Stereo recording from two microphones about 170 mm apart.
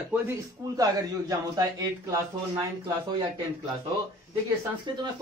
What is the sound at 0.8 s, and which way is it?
A man's voice, 20° right (ahead or behind).